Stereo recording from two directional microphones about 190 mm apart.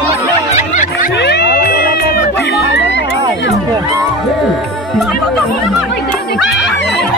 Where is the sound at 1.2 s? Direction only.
60° left (ahead or behind).